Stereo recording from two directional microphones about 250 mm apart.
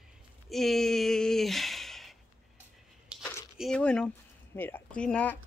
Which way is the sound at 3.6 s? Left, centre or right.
Centre.